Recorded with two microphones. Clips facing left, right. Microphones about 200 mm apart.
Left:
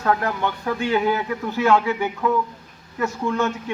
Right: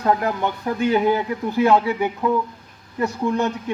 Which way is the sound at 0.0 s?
15° right (ahead or behind).